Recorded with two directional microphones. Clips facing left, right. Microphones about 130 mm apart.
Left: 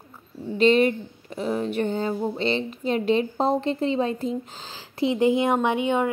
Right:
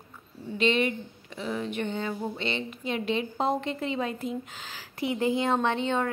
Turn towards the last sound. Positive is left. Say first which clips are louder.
# left 4 dB
turn(degrees=10)  # may be behind; listen again after turning